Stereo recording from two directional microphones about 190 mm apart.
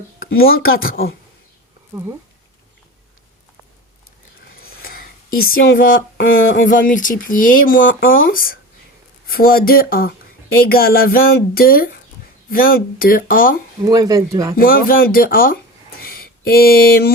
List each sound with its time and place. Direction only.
0.3 s speech: 90° left
0.6 s speech: 50° left (ahead or behind)
4.8 s a sound: 50° left (ahead or behind)
5.5 s speech: 45° left (ahead or behind)
13.8 s speech: 20° right (ahead or behind)
14.5 s speech: 50° left (ahead or behind)
16.0 s a sound: 50° left (ahead or behind)